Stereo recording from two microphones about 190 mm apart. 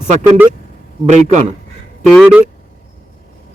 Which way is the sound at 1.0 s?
40° right (ahead or behind).